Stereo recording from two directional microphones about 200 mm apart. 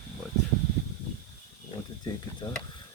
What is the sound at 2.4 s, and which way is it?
Speech, 25° left (ahead or behind).